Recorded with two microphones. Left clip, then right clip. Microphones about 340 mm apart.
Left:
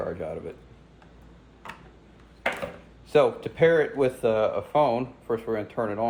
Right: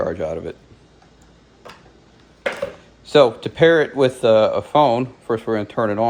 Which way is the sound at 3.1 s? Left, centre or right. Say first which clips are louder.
Right 7 dB; right.